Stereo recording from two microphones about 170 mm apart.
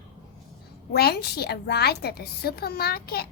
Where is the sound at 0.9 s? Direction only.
70° left (ahead or behind).